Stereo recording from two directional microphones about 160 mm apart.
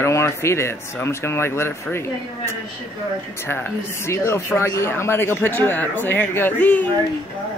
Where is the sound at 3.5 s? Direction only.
15° left (ahead or behind).